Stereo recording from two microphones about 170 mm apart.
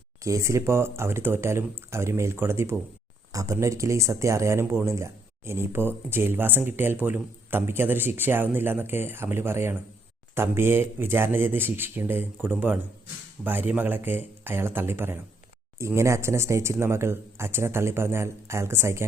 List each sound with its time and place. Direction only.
0.2 s speech: 20° right (ahead or behind)